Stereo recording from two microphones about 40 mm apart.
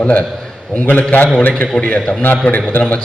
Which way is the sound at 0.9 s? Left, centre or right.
Left.